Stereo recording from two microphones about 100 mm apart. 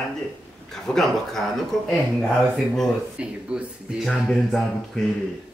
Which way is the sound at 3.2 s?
10° right (ahead or behind).